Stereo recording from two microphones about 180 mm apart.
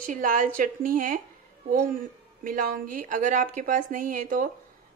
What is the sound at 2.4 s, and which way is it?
Speech, 50° right (ahead or behind).